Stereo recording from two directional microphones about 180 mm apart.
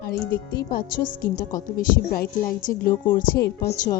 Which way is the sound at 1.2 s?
50° left (ahead or behind).